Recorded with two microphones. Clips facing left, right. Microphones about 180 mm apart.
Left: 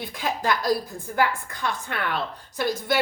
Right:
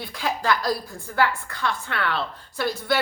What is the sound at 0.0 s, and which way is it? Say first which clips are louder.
A woman's voice: even; 20° left (ahead or behind).